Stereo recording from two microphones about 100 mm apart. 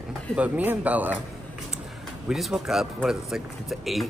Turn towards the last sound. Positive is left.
turn(degrees=0)  # may be behind; listen again after turning